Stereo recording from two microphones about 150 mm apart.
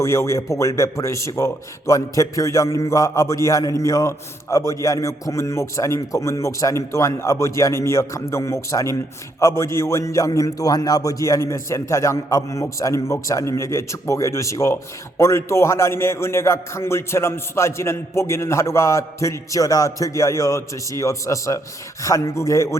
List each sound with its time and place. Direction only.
0.0 s a man's voice: 20° left (ahead or behind)